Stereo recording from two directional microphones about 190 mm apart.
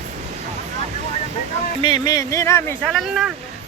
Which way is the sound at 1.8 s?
25° left (ahead or behind).